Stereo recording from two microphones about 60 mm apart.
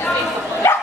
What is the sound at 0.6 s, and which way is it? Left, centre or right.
Dog, left.